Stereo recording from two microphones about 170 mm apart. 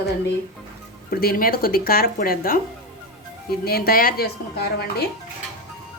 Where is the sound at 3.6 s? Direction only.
65° left (ahead or behind).